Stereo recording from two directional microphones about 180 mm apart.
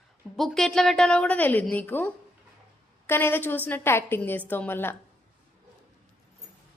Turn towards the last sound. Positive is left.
turn(degrees=10)  # may be behind; listen again after turning